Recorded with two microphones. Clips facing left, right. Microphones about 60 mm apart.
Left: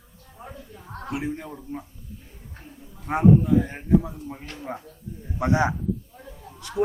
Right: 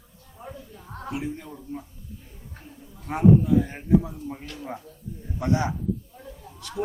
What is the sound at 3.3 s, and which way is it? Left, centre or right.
Speech, centre.